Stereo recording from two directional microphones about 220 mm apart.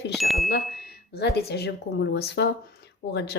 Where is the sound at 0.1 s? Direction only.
Centre (ahead or behind).